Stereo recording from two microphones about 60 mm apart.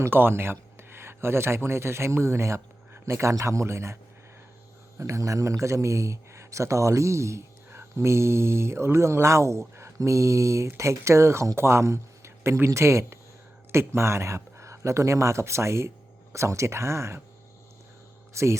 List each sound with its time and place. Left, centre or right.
0.1 s speech: right
4.9 s speech: right
18.4 s speech: right